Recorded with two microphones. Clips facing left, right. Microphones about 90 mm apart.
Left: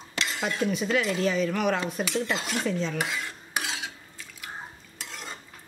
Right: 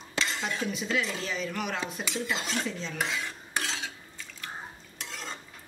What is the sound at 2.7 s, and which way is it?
Speech, 55° left (ahead or behind).